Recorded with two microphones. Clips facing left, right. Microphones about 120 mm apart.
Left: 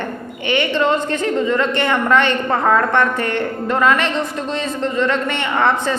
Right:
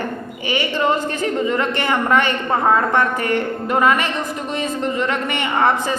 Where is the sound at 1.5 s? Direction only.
15° right (ahead or behind).